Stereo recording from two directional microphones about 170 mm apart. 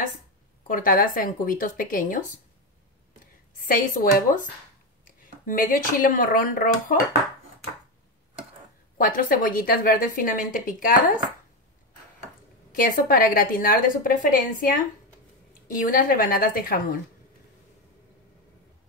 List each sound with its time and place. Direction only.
0.7 s a woman's voice: 55° left (ahead or behind)
3.5 s speech: 55° left (ahead or behind)
5.5 s speech: 55° left (ahead or behind)
8.9 s a woman's voice: 55° left (ahead or behind)
12.7 s a woman's voice: 55° left (ahead or behind)
15.8 s a woman's voice: 55° left (ahead or behind)